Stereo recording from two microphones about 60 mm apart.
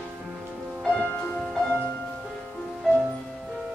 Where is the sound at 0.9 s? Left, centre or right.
Centre.